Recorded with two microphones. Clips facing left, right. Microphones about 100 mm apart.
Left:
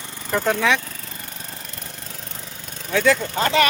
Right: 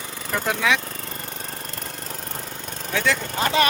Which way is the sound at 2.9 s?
5° right (ahead or behind).